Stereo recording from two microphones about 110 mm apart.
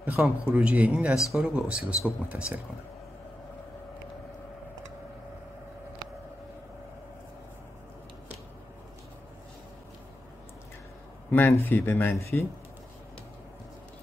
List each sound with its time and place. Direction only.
0.0 s speech: 15° right (ahead or behind)
11.2 s a man's voice: 20° left (ahead or behind)